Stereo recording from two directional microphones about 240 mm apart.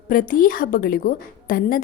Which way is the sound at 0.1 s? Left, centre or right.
Left.